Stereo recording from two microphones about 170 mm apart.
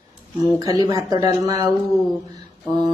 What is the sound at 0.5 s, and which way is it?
Speech, 20° right (ahead or behind).